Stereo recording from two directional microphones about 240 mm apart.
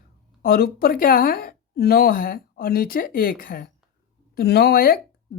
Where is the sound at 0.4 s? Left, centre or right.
Left.